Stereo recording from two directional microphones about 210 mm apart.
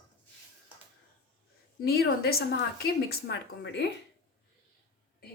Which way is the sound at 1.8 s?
50° left (ahead or behind).